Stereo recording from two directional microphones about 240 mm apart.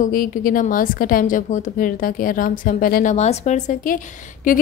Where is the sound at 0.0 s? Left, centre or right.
Left.